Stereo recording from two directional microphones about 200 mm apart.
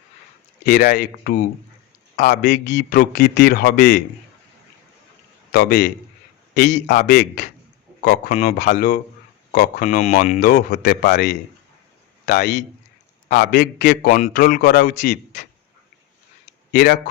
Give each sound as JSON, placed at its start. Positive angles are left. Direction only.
{"t": 0.6, "sound": "a man's voice", "side_deg": 45}
{"t": 5.5, "sound": "a man's voice", "side_deg": 50}
{"t": 6.7, "sound": "a man's voice", "side_deg": 40}
{"t": 8.0, "sound": "a man's voice", "side_deg": 50}
{"t": 8.3, "sound": "a man's voice", "side_deg": 35}
{"t": 8.5, "sound": "a man's voice", "side_deg": 55}
{"t": 16.7, "sound": "a man's voice", "side_deg": 50}